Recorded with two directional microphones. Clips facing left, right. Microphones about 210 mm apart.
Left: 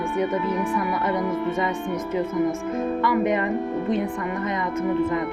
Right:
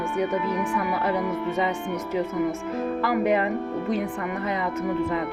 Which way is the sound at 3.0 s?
35° right (ahead or behind).